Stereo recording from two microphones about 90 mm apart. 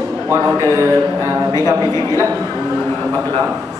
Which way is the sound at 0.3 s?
35° right (ahead or behind).